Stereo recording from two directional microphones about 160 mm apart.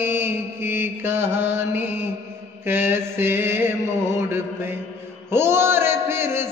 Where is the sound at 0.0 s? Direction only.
15° right (ahead or behind).